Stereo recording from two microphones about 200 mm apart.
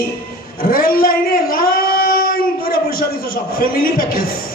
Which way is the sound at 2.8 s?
45° left (ahead or behind).